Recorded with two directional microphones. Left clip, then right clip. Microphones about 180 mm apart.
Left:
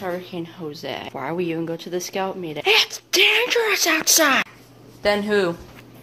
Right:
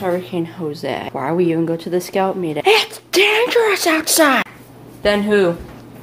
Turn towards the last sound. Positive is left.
turn(degrees=15)  # may be behind; listen again after turning